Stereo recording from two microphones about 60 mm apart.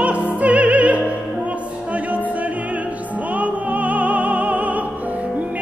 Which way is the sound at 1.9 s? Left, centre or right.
Right.